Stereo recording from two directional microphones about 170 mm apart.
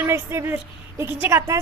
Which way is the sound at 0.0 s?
15° right (ahead or behind).